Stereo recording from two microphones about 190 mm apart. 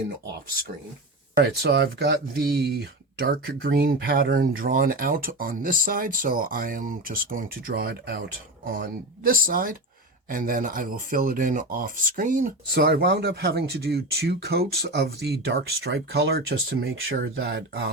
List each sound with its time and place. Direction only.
1.4 s speech: 60° right (ahead or behind)